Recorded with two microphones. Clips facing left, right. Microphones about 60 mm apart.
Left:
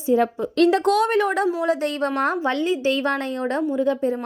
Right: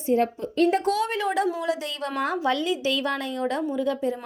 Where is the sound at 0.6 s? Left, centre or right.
Left.